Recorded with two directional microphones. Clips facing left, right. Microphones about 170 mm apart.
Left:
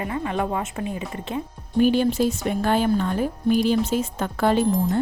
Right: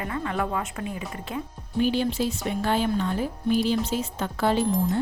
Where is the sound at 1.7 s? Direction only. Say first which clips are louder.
Left 5 dB; 50° left (ahead or behind).